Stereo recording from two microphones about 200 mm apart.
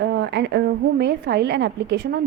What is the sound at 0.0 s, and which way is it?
A woman's voice, 60° right (ahead or behind).